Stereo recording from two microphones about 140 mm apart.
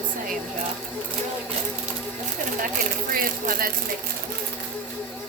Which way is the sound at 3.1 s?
90° right.